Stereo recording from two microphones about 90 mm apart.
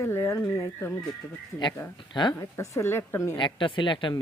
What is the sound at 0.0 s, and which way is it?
Speech, 30° left (ahead or behind).